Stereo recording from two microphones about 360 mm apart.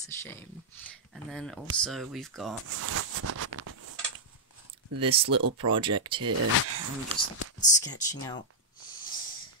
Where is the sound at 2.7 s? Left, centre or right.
Right.